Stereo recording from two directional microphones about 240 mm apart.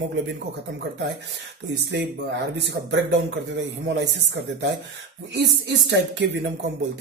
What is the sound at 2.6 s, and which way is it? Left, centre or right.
A man's voice, right.